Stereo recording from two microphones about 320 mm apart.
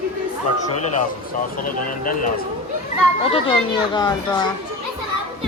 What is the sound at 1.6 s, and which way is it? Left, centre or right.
Speech, left.